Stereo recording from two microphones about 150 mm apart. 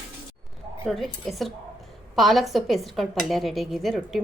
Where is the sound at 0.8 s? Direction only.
Centre (ahead or behind).